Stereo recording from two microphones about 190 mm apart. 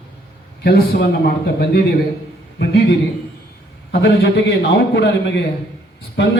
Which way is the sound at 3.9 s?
60° left (ahead or behind).